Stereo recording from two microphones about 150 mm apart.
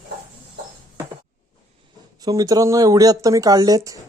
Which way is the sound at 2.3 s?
25° right (ahead or behind).